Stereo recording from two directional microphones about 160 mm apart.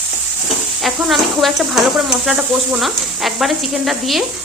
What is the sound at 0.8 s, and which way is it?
Speech, centre (ahead or behind).